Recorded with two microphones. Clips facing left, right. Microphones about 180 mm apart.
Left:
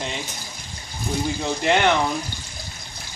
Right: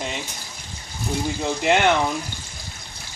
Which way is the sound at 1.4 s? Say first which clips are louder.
Right 1 dB; 10° right (ahead or behind).